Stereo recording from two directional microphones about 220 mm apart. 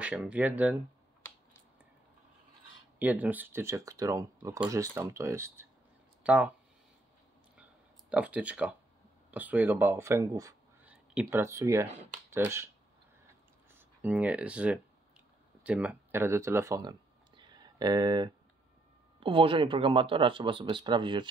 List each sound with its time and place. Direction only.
0.0 s speech: 5° right (ahead or behind)
3.0 s speech: 5° right (ahead or behind)
8.1 s speech: 5° right (ahead or behind)
13.7 s speech: 10° right (ahead or behind)
17.4 s a sound: 20° right (ahead or behind)
19.1 s speech: 25° right (ahead or behind)